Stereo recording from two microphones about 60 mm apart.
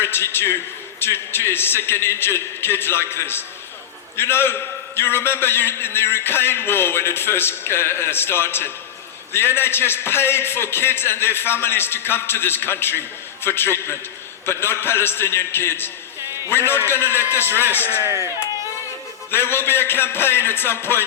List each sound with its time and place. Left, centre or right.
0.0 s a man's voice: left
18.0 s speech: right
19.3 s a man's voice: left